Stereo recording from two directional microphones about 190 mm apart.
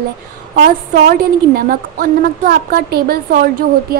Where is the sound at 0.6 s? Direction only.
50° right (ahead or behind).